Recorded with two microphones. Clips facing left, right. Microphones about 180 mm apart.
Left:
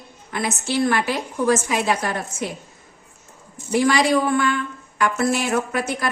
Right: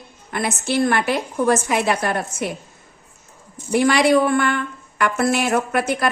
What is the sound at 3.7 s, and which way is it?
A woman's voice, 60° right (ahead or behind).